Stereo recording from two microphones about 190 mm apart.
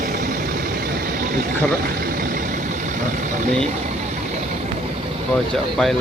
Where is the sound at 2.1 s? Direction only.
50° right (ahead or behind).